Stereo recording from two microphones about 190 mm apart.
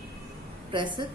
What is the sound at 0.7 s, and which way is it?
Speech, 25° right (ahead or behind).